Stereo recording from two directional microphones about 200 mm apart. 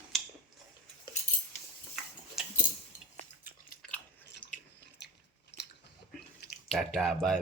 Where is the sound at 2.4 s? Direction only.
Centre (ahead or behind).